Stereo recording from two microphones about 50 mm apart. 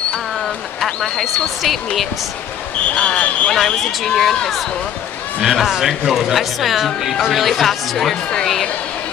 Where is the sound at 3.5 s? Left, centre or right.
Centre.